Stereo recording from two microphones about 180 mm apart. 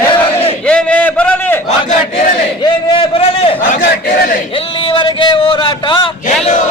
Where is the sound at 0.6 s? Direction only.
5° left (ahead or behind).